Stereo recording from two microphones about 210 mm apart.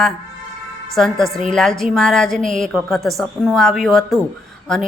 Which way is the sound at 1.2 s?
Centre (ahead or behind).